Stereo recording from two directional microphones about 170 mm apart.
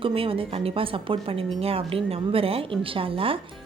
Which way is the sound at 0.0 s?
30° right (ahead or behind).